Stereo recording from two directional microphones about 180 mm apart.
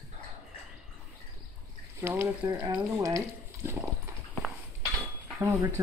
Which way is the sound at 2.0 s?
15° right (ahead or behind).